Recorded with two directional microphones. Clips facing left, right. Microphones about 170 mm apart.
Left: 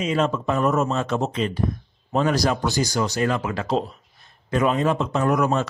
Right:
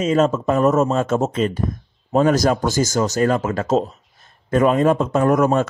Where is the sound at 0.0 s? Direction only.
45° right (ahead or behind).